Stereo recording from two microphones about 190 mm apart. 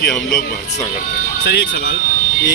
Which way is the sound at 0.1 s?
5° left (ahead or behind).